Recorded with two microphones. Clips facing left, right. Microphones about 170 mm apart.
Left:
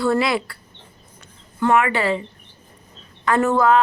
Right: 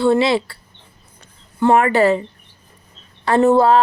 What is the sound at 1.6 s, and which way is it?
Speech, 35° right (ahead or behind).